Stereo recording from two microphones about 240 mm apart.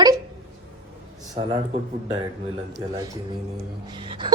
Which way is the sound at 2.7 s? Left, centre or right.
Centre.